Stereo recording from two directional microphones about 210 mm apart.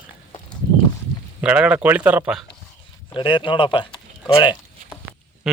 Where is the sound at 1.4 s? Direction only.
5° right (ahead or behind).